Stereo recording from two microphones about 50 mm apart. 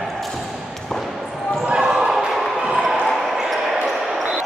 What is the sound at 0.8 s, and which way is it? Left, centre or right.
Basketball bounce, centre.